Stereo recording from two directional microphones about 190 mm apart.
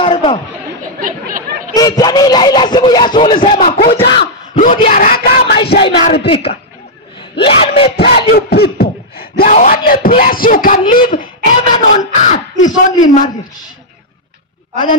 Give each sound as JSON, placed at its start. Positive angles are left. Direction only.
{"t": 0.0, "sound": "chatter", "side_deg": 25}
{"t": 1.0, "sound": "chatter", "side_deg": -45}
{"t": 1.7, "sound": "speech", "side_deg": 20}
{"t": 3.5, "sound": "a man's voice", "side_deg": 45}
{"t": 4.7, "sound": "speech", "side_deg": 40}
{"t": 5.8, "sound": "speech", "side_deg": 30}
{"t": 7.4, "sound": "wail", "side_deg": 30}
{"t": 8.0, "sound": "a sound", "side_deg": 30}
{"t": 8.3, "sound": "a man's voice", "side_deg": 55}